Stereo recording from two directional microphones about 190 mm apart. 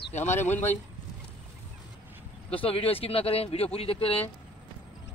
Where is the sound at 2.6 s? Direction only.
30° left (ahead or behind).